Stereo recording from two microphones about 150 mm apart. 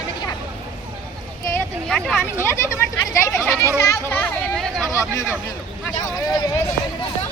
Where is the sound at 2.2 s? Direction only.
20° left (ahead or behind).